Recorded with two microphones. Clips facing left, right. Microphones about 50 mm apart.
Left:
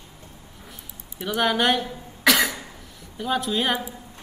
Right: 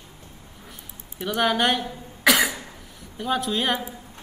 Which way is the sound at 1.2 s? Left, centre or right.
Centre.